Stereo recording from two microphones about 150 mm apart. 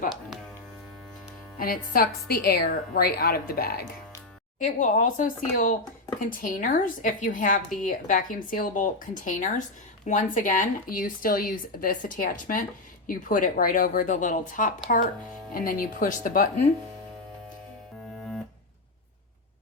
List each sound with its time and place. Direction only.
1.5 s speech: 75° left (ahead or behind); by 3.8 s 90° left
4.6 s speech: 60° left (ahead or behind)